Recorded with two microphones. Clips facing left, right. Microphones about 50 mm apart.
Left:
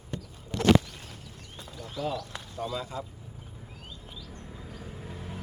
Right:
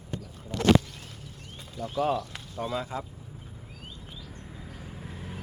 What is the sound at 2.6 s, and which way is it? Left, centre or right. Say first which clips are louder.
Speech: right 2 dB; right.